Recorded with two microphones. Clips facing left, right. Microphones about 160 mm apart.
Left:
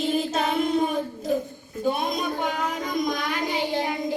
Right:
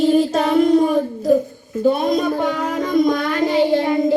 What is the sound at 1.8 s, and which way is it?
Child singing, 45° right (ahead or behind).